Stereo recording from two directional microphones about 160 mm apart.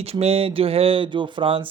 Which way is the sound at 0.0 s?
40° right (ahead or behind).